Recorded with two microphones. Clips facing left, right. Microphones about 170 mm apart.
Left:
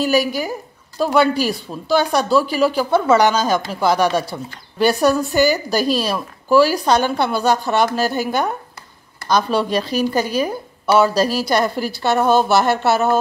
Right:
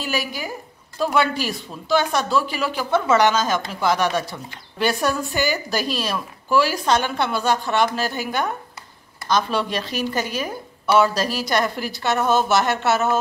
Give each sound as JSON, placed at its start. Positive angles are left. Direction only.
{"t": 0.0, "sound": "speech", "side_deg": 40}